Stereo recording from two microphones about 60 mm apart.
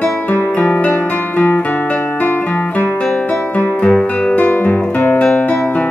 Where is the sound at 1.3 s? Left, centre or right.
Left.